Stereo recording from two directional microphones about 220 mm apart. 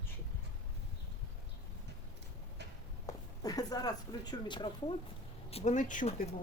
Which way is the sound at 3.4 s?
15° left (ahead or behind).